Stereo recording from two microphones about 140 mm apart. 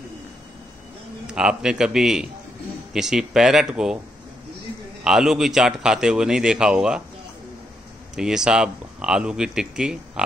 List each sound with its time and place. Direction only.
1.2 s speech: 5° right (ahead or behind)
5.0 s speech: 5° right (ahead or behind)
8.2 s speech: 5° right (ahead or behind)